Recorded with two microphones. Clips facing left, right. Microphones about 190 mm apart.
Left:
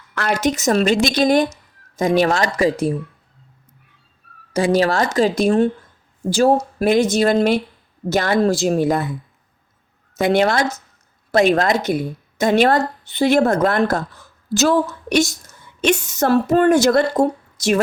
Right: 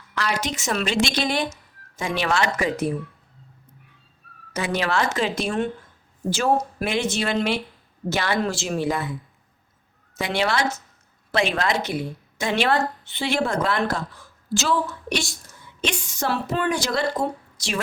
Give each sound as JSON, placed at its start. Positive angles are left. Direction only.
{"t": 0.2, "sound": "a woman's voice", "side_deg": 45}
{"t": 4.5, "sound": "a woman's voice", "side_deg": 35}
{"t": 6.7, "sound": "a woman's voice", "side_deg": 40}
{"t": 10.2, "sound": "a woman's voice", "side_deg": 50}